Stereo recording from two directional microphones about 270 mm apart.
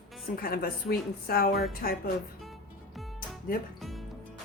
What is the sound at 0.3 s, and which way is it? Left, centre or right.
A woman's voice, left.